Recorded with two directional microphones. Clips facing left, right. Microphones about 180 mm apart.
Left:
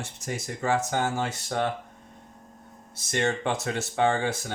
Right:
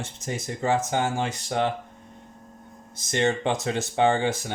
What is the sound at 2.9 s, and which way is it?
Speech, 20° right (ahead or behind).